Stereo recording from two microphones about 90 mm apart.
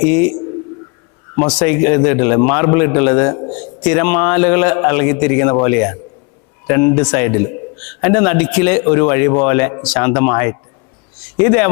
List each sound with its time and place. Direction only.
0.0 s a man's voice: 10° left (ahead or behind)
1.5 s a man's voice: 10° left (ahead or behind)